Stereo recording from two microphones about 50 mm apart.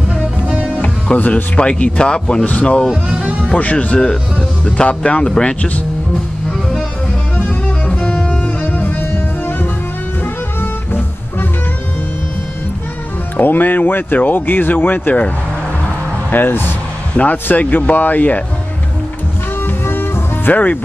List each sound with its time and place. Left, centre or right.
0.7 s speech: left
3.1 s music: right
3.7 s speech: centre
7.3 s music: left
13.4 s speech: left
16.3 s speech: left
17.1 s speech: left
19.6 s music: left